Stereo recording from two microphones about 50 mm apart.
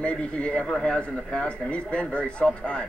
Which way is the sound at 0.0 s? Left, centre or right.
Left.